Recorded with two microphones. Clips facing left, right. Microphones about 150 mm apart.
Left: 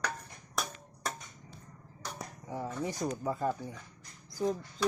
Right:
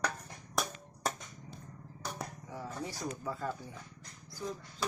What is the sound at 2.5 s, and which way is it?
Speech, 20° left (ahead or behind).